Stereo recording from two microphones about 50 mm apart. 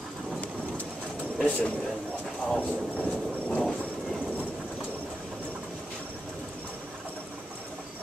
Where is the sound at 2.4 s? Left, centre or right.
Left.